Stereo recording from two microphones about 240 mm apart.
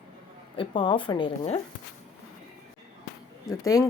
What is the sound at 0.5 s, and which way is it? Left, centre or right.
Speech, left.